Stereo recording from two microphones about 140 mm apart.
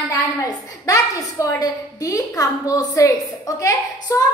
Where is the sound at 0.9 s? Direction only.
25° left (ahead or behind).